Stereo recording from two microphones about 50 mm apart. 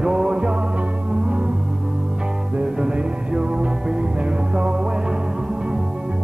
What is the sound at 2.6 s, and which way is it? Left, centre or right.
Music, centre.